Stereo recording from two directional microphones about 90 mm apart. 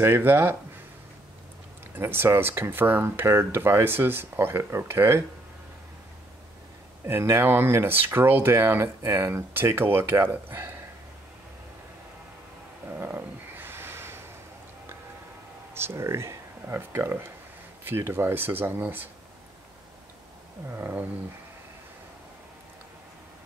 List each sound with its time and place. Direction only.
0.0 s speech: 25° right (ahead or behind)
2.0 s speech: 25° right (ahead or behind)
7.1 s speech: 25° right (ahead or behind)
12.8 s a sound: 25° right (ahead or behind)
15.7 s speech: 25° right (ahead or behind)
20.7 s speech: 25° right (ahead or behind)